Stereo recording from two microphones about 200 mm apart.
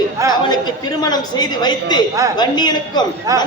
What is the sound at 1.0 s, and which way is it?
A woman's voice, 20° left (ahead or behind).